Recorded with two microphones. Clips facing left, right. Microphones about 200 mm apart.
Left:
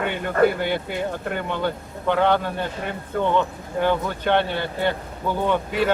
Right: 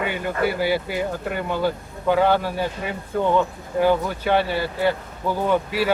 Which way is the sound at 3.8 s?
5° right (ahead or behind).